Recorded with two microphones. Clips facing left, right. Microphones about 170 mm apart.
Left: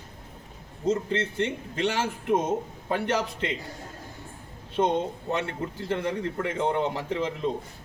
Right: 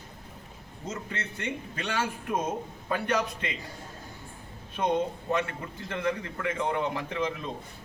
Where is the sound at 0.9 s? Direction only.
30° left (ahead or behind).